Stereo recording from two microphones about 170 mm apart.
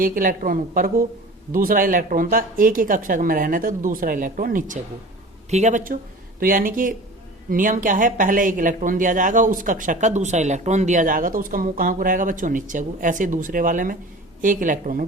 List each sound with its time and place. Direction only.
0.0 s speech: 55° right (ahead or behind)
5.5 s speech: 40° right (ahead or behind)